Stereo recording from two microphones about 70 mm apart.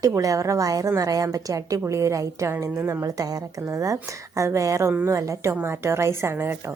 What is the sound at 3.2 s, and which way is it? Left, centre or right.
A woman's voice, right.